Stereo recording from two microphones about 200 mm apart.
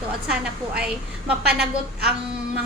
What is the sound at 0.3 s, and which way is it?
A woman's voice, 5° right (ahead or behind).